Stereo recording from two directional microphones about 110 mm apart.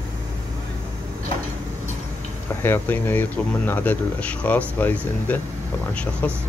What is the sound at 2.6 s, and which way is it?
Speech, 20° left (ahead or behind).